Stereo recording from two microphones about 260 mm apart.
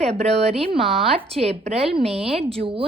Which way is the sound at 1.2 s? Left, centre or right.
Right.